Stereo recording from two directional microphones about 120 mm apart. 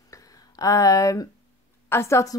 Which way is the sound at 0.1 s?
30° left (ahead or behind).